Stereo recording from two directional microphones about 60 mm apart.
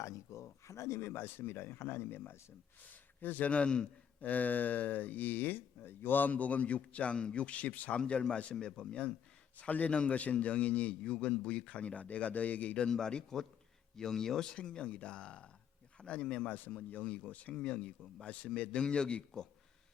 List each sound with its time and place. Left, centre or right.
0.0 s a man's voice: left; by 4.3 s centre
4.3 s speech: left